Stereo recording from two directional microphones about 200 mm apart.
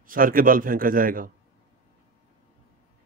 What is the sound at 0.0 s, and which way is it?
A man's voice, 45° right (ahead or behind).